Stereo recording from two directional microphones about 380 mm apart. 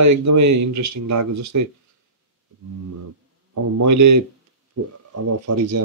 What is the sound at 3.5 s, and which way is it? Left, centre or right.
Speech, right.